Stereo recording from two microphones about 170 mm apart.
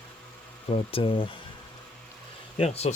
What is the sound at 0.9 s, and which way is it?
Speech, 30° left (ahead or behind).